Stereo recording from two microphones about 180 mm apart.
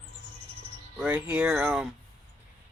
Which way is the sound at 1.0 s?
10° right (ahead or behind).